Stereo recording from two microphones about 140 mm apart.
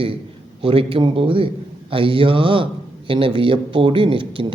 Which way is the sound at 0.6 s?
40° right (ahead or behind).